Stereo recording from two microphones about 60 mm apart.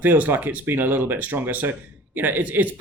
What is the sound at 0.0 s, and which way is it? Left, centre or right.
Speech, right.